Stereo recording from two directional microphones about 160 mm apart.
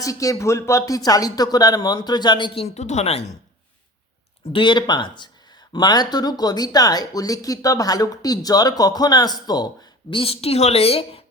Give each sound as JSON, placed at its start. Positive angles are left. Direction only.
{"t": 0.0, "sound": "speech", "side_deg": 20}
{"t": 2.6, "sound": "speech", "side_deg": 45}
{"t": 4.5, "sound": "speech", "side_deg": 30}